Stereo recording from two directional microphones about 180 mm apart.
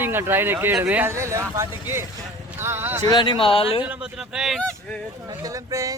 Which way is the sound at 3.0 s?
25° left (ahead or behind).